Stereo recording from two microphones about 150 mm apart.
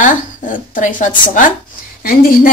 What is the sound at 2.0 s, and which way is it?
Speech, 70° left (ahead or behind).